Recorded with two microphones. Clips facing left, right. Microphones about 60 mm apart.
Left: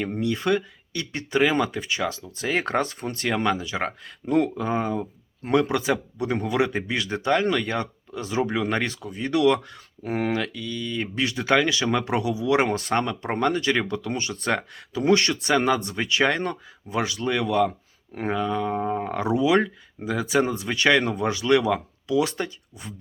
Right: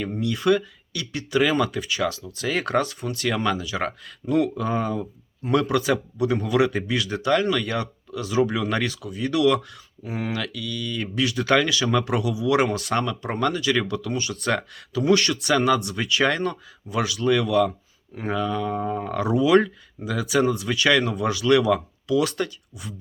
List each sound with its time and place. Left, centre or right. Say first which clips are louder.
0.2 s speech: right 3 dB; left
10.0 s speech: left 4 dB; left
10.3 s speech: left 1 dB; left